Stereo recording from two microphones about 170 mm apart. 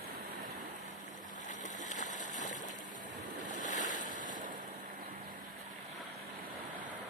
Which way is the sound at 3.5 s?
50° left (ahead or behind).